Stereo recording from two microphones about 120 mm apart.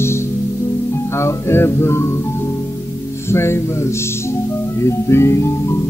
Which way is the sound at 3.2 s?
20° left (ahead or behind).